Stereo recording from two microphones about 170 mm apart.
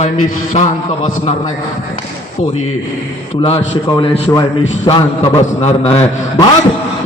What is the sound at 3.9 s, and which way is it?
A man's voice, 30° left (ahead or behind).